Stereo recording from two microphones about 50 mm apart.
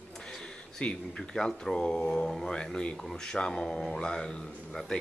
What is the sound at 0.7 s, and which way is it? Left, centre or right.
A woman's voice, centre.